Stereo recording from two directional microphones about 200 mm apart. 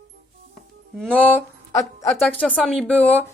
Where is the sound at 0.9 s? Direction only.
5° left (ahead or behind).